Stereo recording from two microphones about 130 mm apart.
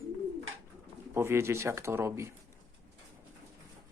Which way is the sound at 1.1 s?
20° right (ahead or behind).